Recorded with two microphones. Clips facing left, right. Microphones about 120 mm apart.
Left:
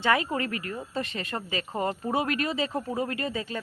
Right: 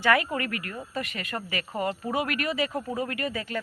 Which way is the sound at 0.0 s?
20° left (ahead or behind).